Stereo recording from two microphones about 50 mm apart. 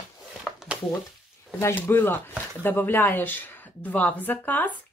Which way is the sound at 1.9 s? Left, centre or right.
Left.